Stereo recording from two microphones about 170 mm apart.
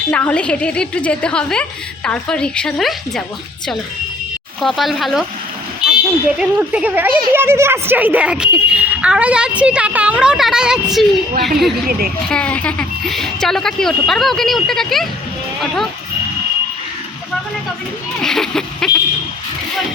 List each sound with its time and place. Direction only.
0.1 s a woman's voice: 10° left (ahead or behind)
4.6 s a child's voice: centre (ahead or behind)
11.9 s speech: 60° right (ahead or behind)
12.3 s speech: 5° left (ahead or behind)
18.2 s speech: 5° left (ahead or behind)